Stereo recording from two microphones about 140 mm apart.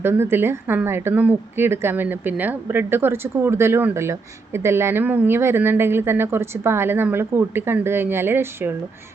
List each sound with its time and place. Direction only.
0.0 s a woman's voice: 15° right (ahead or behind)